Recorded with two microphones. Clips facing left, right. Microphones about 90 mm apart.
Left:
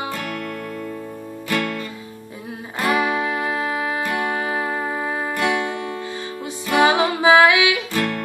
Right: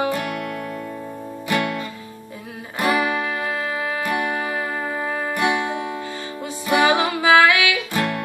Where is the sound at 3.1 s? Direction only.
15° left (ahead or behind).